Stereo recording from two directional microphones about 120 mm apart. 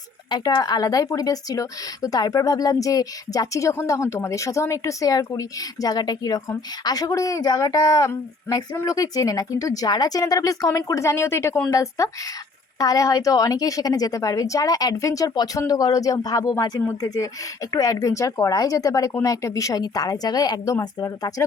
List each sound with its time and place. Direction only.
0.3 s a woman's voice: 35° left (ahead or behind)